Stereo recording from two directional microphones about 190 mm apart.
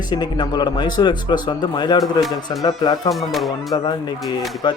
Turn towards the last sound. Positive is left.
turn(degrees=0)  # may be behind; listen again after turning